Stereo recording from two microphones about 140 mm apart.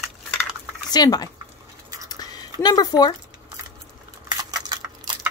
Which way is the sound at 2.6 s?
30° left (ahead or behind).